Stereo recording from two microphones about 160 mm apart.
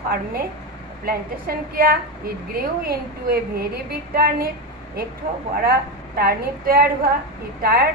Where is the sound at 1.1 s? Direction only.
70° right (ahead or behind).